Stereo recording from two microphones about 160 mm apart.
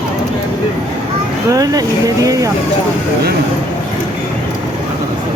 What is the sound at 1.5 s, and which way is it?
Speech, 25° right (ahead or behind).